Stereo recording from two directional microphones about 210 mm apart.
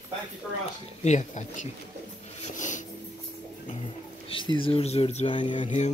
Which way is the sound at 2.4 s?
35° left (ahead or behind).